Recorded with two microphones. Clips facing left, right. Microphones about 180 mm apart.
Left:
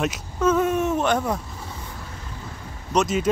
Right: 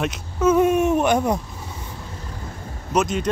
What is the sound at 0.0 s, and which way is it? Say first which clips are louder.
Speech: right 1 dB; centre (ahead or behind).